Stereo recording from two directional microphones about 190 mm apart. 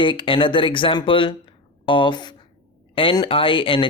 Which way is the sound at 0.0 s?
25° left (ahead or behind).